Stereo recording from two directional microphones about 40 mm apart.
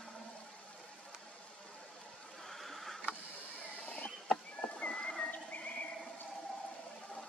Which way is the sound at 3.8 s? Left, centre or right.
Left.